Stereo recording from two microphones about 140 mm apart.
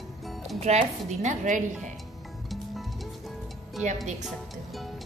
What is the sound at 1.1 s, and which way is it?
Speech, 60° right (ahead or behind).